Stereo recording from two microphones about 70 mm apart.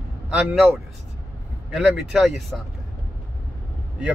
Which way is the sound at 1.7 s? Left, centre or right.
Centre.